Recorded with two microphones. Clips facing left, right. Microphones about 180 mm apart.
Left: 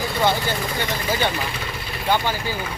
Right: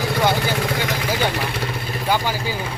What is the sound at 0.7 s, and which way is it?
Vehicle, 90° right.